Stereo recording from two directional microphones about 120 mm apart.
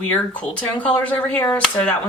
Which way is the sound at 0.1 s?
15° left (ahead or behind).